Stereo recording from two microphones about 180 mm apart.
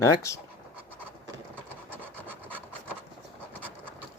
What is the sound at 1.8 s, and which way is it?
Rub, 10° right (ahead or behind).